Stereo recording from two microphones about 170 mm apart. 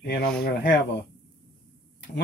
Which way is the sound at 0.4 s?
65° left (ahead or behind).